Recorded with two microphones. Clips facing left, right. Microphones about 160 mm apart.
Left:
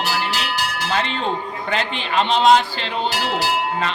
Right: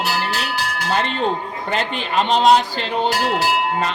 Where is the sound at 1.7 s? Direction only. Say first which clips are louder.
Right 1 dB; 45° right (ahead or behind).